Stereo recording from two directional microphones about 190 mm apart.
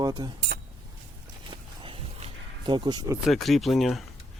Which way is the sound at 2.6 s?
20° right (ahead or behind).